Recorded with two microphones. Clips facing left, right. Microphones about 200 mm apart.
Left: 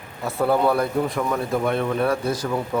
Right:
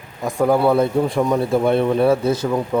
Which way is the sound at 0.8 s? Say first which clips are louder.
Right 5 dB; 30° right (ahead or behind).